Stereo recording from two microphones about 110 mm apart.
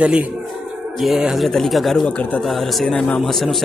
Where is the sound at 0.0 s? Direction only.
10° right (ahead or behind); by 2.4 s 10° left (ahead or behind).